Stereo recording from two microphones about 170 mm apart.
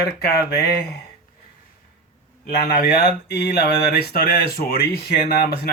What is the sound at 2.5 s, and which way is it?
Speech, 65° left (ahead or behind).